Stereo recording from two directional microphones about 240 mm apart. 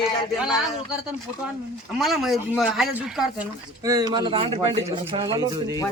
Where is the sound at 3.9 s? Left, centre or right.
Centre.